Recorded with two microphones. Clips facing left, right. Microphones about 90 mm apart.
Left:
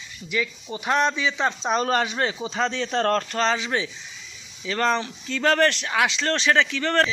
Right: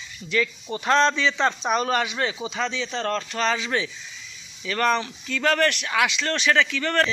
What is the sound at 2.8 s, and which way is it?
Speech, 50° left (ahead or behind).